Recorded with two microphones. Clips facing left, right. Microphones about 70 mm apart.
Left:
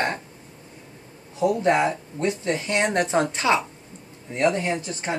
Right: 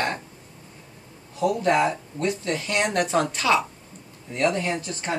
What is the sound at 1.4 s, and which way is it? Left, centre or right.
Speech, left.